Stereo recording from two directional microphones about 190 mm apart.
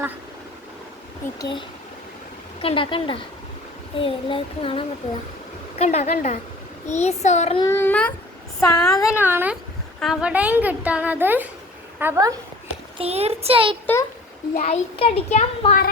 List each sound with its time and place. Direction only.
1.4 s child singing: 25° left (ahead or behind)
5.8 s a child's voice: 35° left (ahead or behind)
7.6 s speech: 15° left (ahead or behind)
8.7 s a sound: 5° left (ahead or behind)
9.0 s speech: 15° left (ahead or behind)
9.2 s a woman's voice: 10° right (ahead or behind)
13.0 s speech: 35° right (ahead or behind)
14.5 s a child's voice: 35° left (ahead or behind)